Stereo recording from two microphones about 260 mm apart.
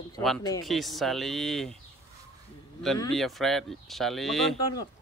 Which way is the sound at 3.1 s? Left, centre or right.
Centre.